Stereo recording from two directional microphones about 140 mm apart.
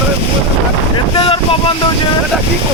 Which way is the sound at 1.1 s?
40° left (ahead or behind).